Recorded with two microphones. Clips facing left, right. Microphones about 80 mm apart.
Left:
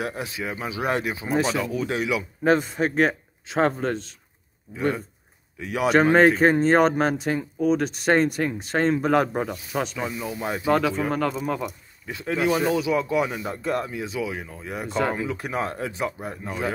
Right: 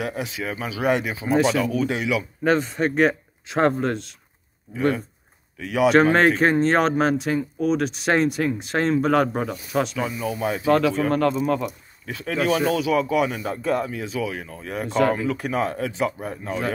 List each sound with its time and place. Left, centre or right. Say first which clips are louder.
0.1 s a man's voice: right 2 dB; centre
1.6 s speech: right 4 dB; left
2.0 s speech: left 3 dB; centre
4.7 s a man's voice: right 3 dB; centre
6.1 s a man's voice: left 1 dB; centre
9.9 s a man's voice: right 3 dB; centre
13.6 s speech: right 3 dB; centre
13.8 s a man's voice: right 2 dB; centre
16.4 s a man's voice: right 2 dB; centre